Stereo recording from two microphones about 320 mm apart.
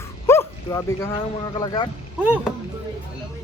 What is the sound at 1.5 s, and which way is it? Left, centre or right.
Speech, centre.